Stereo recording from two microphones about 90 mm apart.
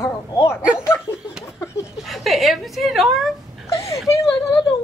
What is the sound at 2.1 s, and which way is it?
A woman's voice, centre (ahead or behind).